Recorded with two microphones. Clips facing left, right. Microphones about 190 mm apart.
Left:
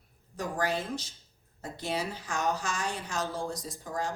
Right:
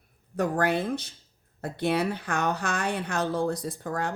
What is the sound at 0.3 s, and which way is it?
Speech, 60° right (ahead or behind).